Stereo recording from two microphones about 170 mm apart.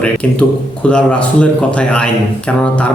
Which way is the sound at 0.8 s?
5° left (ahead or behind).